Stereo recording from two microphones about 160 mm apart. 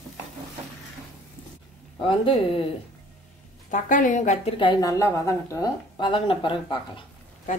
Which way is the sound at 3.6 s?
50° left (ahead or behind).